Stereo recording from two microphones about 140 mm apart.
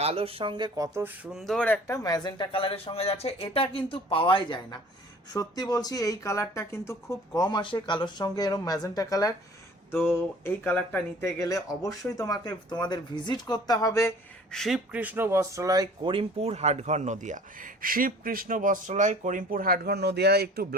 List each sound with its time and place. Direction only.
0.0 s speech: 45° right (ahead or behind)
0.9 s speech: 15° right (ahead or behind)
1.3 s speech: centre (ahead or behind)
1.6 s speech: 10° left (ahead or behind)
2.0 s speech: 25° left (ahead or behind)
14.5 s speech: centre (ahead or behind)
14.9 s speech: 15° right (ahead or behind); by 19.9 s 90° right